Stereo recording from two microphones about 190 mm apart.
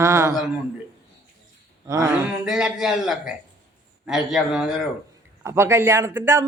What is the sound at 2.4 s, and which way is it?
A man's voice, centre (ahead or behind).